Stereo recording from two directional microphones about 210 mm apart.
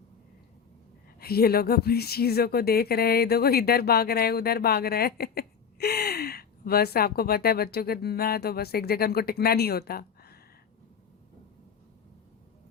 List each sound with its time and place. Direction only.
1.2 s speech: 45° left (ahead or behind)